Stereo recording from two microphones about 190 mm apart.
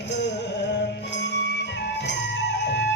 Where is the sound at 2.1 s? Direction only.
65° left (ahead or behind).